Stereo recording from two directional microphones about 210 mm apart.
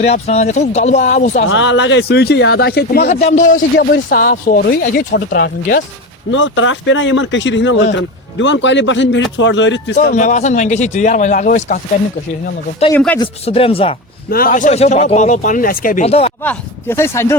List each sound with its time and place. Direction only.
0.0 s speech: 30° left (ahead or behind)
1.5 s speech: 60° left (ahead or behind)
3.1 s speech: 30° left (ahead or behind)
3.8 s speech: 45° left (ahead or behind)
6.3 s speech: 65° left (ahead or behind)
9.9 s speech: 35° left (ahead or behind)
12.9 s speech: 10° left (ahead or behind)
13.1 s speech: 25° left (ahead or behind)
14.3 s speech: 45° left (ahead or behind); by 16.3 s 30° left (ahead or behind)
16.4 s speech: 10° left (ahead or behind)